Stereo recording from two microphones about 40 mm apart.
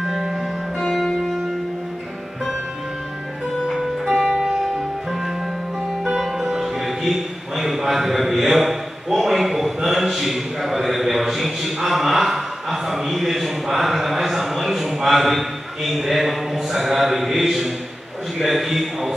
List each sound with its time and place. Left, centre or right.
0.0 s music: centre
0.7 s music: centre
4.0 s music: centre
4.4 s music: centre
6.2 s music: centre
16.7 s a man's voice: centre